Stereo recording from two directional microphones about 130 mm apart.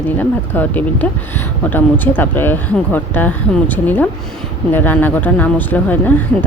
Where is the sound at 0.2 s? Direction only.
15° left (ahead or behind).